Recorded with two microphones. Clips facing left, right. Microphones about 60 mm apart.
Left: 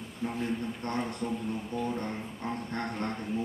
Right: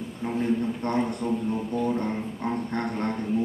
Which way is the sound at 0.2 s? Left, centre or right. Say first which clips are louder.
Right 4 dB; centre.